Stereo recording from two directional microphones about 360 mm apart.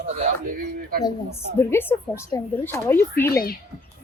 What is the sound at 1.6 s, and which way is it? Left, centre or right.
Speech, centre.